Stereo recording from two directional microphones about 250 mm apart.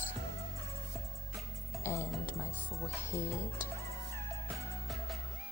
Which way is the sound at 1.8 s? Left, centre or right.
Centre.